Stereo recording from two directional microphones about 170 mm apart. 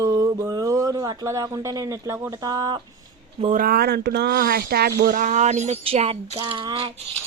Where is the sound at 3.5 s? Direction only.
60° right (ahead or behind); by 7.0 s 30° right (ahead or behind).